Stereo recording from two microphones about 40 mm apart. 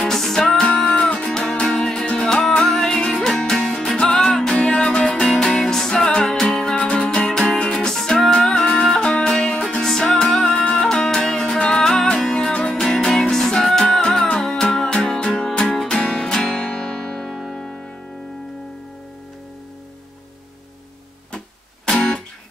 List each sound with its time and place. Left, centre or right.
0.0 s music: centre
0.7 s music: left
4.6 s music: left
5.1 s music: centre
7.7 s music: centre
10.4 s music: left
11.1 s music: centre
12.7 s music: centre
15.6 s music: centre
16.0 s music: centre
21.8 s music: centre